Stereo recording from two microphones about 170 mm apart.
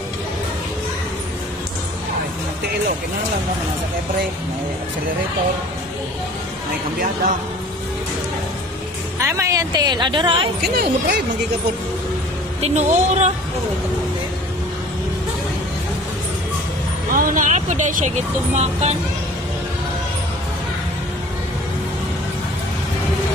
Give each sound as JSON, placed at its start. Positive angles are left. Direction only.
{"t": 9.2, "sound": "speech", "side_deg": -20}
{"t": 10.6, "sound": "speech", "side_deg": -65}
{"t": 12.6, "sound": "speech", "side_deg": -45}
{"t": 17.1, "sound": "speech", "side_deg": -55}